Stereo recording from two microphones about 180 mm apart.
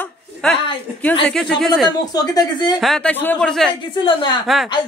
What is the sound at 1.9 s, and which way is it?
Speech, 20° left (ahead or behind).